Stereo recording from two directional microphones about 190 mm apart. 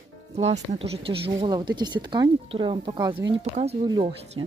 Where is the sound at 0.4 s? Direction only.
35° right (ahead or behind).